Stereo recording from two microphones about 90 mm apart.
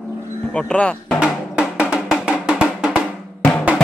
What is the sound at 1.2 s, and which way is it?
Drum, 15° right (ahead or behind).